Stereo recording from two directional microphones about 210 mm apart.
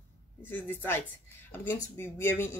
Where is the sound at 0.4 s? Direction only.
10° left (ahead or behind).